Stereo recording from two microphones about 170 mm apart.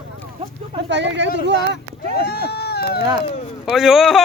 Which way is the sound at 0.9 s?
90° right.